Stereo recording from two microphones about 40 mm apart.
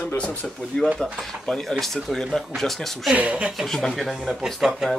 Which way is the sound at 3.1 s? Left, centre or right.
Right.